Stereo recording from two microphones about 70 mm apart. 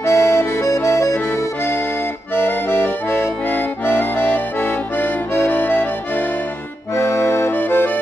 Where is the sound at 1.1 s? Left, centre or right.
Left.